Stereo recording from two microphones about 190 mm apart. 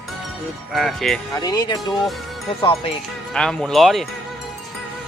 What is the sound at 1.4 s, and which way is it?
Speech, 20° left (ahead or behind).